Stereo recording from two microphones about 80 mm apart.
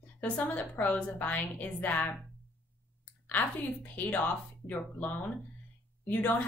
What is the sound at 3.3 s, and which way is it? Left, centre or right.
A woman's voice, left.